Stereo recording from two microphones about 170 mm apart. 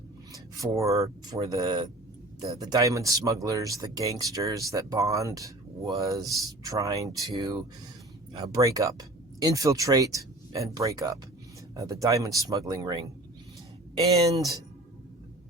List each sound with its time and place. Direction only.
0.5 s speech: 20° right (ahead or behind)